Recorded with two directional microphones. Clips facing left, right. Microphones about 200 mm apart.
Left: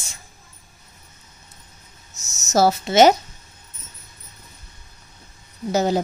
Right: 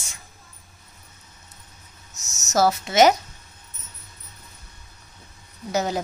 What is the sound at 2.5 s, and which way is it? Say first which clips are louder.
Speech: left 3 dB; 30° left (ahead or behind).